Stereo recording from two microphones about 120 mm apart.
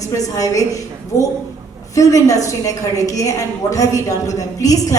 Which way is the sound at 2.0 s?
30° left (ahead or behind).